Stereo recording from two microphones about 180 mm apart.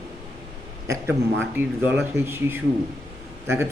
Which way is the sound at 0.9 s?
10° right (ahead or behind).